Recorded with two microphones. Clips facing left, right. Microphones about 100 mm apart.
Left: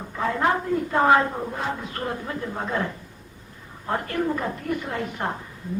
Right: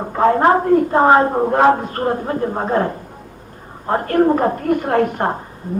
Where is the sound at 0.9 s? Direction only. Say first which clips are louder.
Right 6 dB; 35° right (ahead or behind).